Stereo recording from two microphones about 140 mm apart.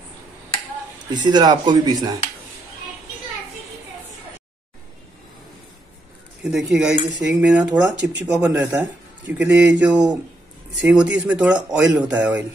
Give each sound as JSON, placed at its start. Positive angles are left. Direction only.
{"t": 1.1, "sound": "speech", "side_deg": -30}
{"t": 6.4, "sound": "speech", "side_deg": -5}